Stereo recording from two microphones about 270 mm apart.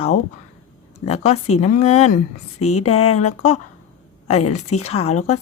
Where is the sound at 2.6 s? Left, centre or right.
Left.